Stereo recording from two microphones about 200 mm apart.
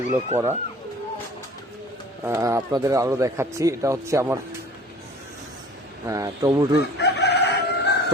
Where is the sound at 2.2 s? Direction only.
15° right (ahead or behind).